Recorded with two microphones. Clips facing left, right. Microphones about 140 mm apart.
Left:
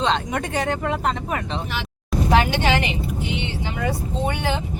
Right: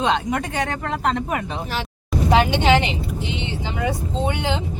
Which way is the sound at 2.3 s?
15° right (ahead or behind).